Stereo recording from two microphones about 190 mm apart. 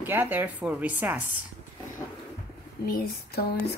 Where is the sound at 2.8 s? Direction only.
55° left (ahead or behind).